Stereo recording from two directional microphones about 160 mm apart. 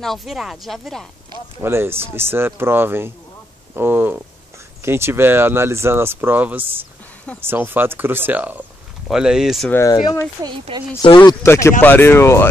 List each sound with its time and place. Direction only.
0.0 s speech: centre (ahead or behind)
1.6 s speech: 15° right (ahead or behind)
9.7 s speech: 15° left (ahead or behind)
11.4 s speech: 15° left (ahead or behind)